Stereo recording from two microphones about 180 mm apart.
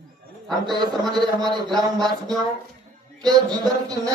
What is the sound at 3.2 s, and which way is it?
Speech, 20° right (ahead or behind).